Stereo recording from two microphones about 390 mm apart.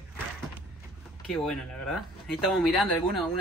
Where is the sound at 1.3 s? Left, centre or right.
Centre.